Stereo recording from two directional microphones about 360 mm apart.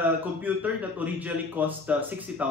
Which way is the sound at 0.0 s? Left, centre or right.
Centre.